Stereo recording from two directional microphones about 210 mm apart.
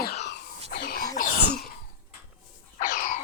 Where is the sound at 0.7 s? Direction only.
45° left (ahead or behind).